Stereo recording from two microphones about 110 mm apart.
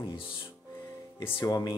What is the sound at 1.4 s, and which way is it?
Speech, 40° left (ahead or behind).